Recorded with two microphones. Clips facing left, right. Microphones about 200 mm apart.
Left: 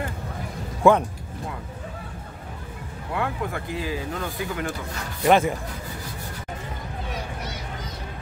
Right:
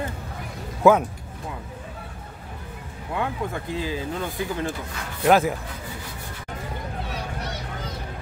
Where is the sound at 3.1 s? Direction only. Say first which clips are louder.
Even; 20° right (ahead or behind).